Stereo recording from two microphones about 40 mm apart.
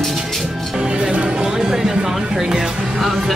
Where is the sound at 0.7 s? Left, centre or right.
Right.